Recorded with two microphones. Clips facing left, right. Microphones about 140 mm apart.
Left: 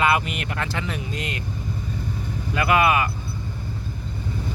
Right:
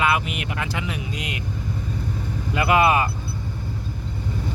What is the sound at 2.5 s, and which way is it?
Speech, 20° right (ahead or behind).